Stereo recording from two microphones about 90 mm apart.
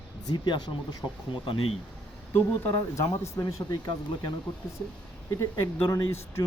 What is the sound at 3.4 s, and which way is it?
Speech, 55° left (ahead or behind).